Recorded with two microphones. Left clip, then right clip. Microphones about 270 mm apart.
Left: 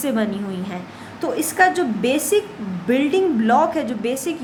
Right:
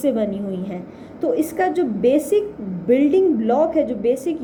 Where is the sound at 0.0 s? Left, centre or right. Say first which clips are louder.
Right 2 dB; centre.